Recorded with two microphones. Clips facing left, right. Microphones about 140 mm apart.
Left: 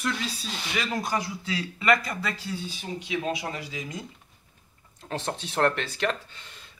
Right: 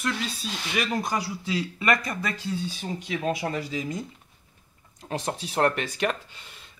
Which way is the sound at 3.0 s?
45° right (ahead or behind).